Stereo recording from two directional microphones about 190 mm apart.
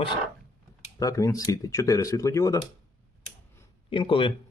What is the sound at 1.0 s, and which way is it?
Speech, 15° left (ahead or behind).